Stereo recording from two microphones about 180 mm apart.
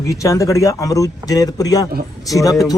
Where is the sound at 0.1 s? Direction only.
15° left (ahead or behind).